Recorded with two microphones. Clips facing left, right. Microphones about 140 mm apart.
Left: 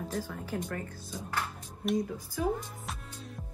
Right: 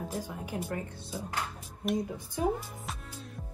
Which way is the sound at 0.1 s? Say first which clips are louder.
Left 1 dB; 15° right (ahead or behind).